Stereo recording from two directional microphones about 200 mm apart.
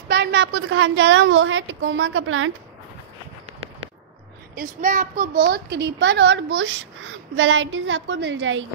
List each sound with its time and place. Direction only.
0.1 s a woman's voice: 60° right (ahead or behind); by 2.5 s 85° right
4.6 s a child's voice: 45° right (ahead or behind)
5.4 s a woman's voice: 55° right (ahead or behind); by 8.6 s 70° right (ahead or behind)